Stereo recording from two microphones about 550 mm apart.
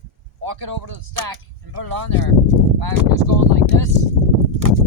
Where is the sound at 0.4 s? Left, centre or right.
Right.